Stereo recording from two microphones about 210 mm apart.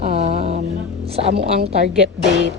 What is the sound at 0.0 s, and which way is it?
Music, 30° right (ahead or behind).